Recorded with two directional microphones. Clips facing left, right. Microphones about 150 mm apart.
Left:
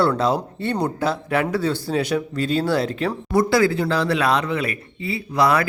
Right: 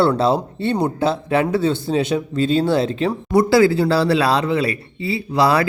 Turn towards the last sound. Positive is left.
turn(degrees=-30)  # may be behind; listen again after turning